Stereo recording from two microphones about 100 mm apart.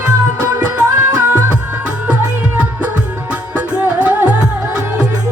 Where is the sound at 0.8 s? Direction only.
15° right (ahead or behind).